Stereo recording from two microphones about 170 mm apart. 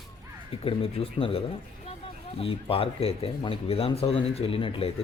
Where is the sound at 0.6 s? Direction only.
35° left (ahead or behind).